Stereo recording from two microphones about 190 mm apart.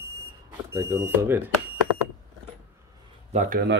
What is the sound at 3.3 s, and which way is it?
Speech, 40° right (ahead or behind).